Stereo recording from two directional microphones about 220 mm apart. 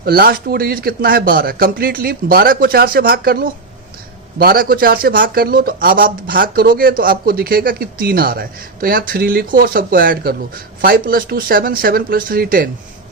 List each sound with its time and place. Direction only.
0.0 s a man's voice: 45° right (ahead or behind)